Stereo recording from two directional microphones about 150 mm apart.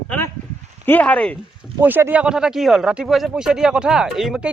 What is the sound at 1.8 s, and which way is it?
Speech, 15° right (ahead or behind).